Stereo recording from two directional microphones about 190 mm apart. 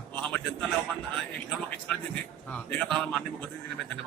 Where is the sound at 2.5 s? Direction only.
5° left (ahead or behind).